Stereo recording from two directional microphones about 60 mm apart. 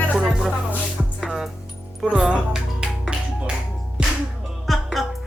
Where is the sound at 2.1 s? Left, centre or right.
Centre.